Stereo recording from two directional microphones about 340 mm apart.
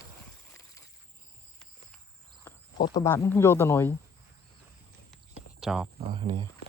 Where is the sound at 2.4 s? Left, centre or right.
Centre.